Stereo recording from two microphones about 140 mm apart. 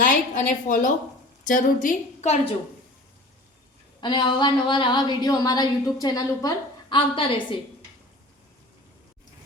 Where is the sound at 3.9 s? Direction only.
35° left (ahead or behind).